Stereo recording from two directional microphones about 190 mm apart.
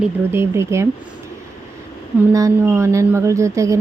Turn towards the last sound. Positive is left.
turn(degrees=-15)  # may be behind; listen again after turning